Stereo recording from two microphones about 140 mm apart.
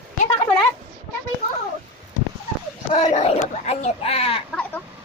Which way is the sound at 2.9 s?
55° left (ahead or behind).